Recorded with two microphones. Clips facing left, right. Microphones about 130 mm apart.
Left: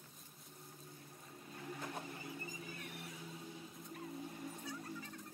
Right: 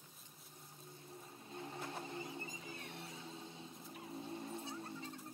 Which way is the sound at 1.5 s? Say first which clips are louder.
Even; 25° right (ahead or behind).